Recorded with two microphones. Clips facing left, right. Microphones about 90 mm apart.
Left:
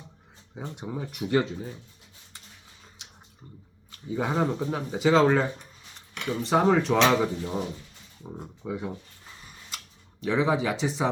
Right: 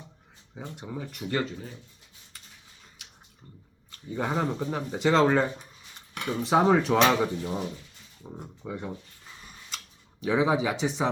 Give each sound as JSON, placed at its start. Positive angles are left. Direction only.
{"t": 0.8, "sound": "speech", "side_deg": 15}
{"t": 3.0, "sound": "a sound", "side_deg": 25}
{"t": 4.1, "sound": "speech", "side_deg": 5}
{"t": 9.6, "sound": "camera", "side_deg": 0}